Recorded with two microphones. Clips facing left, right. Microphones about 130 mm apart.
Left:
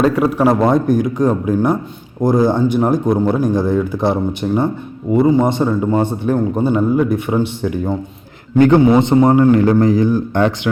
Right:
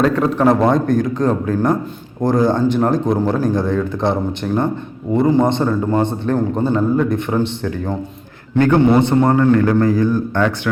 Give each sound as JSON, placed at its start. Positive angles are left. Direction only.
{"t": 0.0, "sound": "a man's voice", "side_deg": 10}